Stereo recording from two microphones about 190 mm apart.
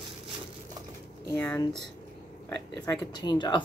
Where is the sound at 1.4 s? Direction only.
10° left (ahead or behind).